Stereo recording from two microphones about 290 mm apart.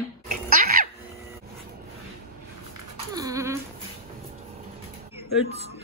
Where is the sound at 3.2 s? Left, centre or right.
Centre.